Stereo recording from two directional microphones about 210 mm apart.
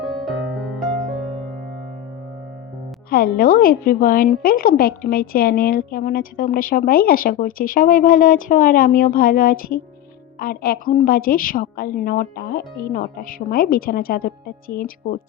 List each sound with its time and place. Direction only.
0.0 s music: centre (ahead or behind)
3.1 s a woman's voice: 45° left (ahead or behind)